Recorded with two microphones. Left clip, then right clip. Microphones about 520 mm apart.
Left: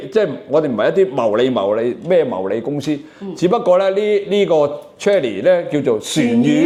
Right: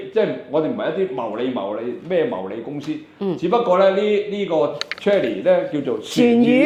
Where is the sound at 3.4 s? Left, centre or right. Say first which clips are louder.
Left 2 dB; left.